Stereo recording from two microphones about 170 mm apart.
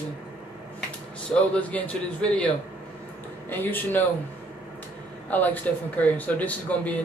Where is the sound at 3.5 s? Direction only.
10° left (ahead or behind).